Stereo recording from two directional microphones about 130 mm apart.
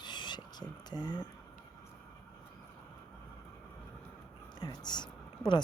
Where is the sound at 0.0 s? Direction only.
35° left (ahead or behind).